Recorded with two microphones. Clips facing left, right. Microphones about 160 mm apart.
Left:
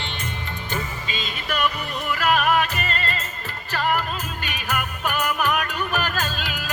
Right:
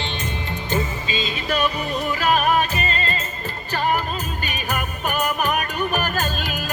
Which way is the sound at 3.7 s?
20° right (ahead or behind).